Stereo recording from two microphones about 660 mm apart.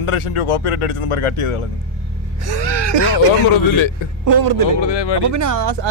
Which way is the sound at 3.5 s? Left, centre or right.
Left.